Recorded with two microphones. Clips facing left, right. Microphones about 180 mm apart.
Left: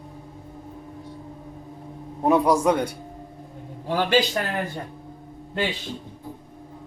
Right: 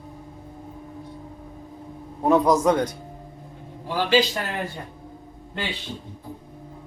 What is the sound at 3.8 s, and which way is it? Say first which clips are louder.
Speech: even; 50° left (ahead or behind).